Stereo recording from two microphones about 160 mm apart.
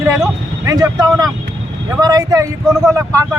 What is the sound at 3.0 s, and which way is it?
Speech, 20° right (ahead or behind).